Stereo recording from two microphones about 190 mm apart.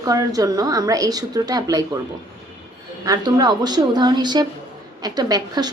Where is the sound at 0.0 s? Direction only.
20° right (ahead or behind).